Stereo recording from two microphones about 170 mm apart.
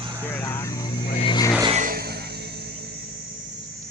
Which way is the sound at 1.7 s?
50° right (ahead or behind).